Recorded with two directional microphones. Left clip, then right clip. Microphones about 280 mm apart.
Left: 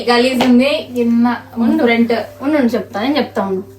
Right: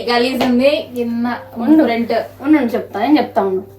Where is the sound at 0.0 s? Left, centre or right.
Left.